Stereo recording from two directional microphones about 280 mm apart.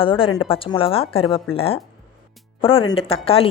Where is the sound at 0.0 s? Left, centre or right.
Centre.